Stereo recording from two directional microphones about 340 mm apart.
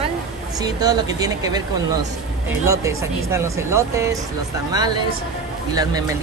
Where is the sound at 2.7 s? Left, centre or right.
Centre.